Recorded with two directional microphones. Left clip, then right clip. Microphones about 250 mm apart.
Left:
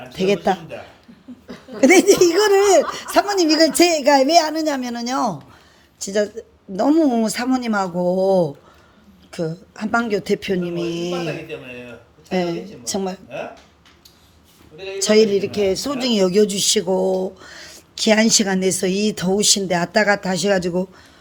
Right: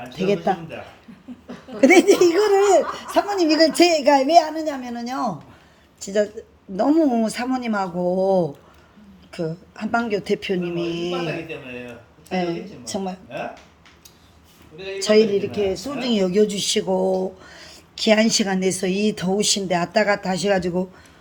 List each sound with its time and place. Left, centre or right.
0.1 s speech: left
1.8 s speech: centre
14.9 s speech: left